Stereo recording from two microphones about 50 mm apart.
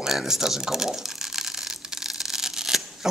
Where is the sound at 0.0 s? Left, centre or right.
Centre.